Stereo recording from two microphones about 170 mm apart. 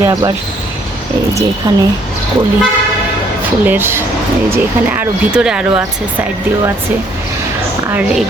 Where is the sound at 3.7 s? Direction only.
10° right (ahead or behind).